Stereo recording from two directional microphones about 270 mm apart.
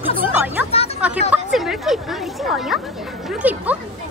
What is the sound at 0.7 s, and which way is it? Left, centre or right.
Music, left.